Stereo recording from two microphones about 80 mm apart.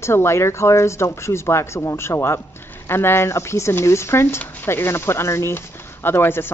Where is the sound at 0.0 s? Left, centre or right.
Left.